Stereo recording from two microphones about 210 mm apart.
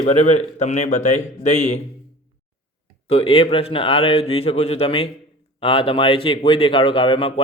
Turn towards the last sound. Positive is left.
turn(degrees=25)  # may be behind; listen again after turning